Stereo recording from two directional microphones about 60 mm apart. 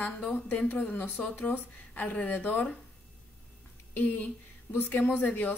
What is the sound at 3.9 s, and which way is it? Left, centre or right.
A woman's voice, left.